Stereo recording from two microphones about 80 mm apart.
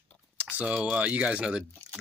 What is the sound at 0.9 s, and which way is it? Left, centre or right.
Speech, centre.